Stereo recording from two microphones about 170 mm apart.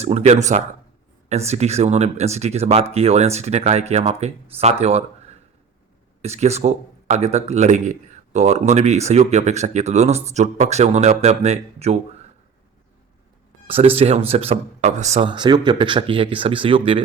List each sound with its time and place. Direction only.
0.0 s a man's voice: 40° right (ahead or behind)
6.2 s a man's voice: 40° right (ahead or behind)
13.7 s a man's voice: 35° right (ahead or behind)
15.3 s a man's voice: 25° right (ahead or behind)